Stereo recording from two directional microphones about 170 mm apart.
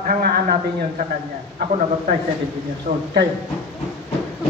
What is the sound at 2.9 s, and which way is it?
Speech, 60° right (ahead or behind).